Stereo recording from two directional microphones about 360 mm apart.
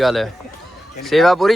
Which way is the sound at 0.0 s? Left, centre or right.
Centre.